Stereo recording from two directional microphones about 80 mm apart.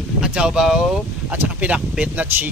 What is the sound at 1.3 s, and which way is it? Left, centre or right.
Speech, centre.